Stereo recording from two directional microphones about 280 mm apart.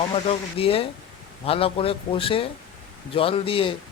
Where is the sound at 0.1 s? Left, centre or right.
Centre.